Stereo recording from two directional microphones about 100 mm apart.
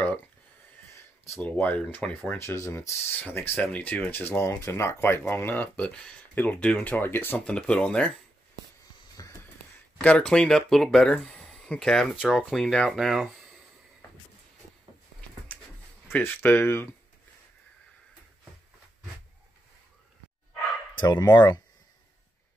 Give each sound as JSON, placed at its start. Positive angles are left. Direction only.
{"t": 1.4, "sound": "speech", "side_deg": 15}
{"t": 9.2, "sound": "wheeze", "side_deg": 40}
{"t": 10.0, "sound": "speech", "side_deg": 10}
{"t": 15.5, "sound": "a sound", "side_deg": 15}
{"t": 16.1, "sound": "speech", "side_deg": 20}
{"t": 21.1, "sound": "speech", "side_deg": 45}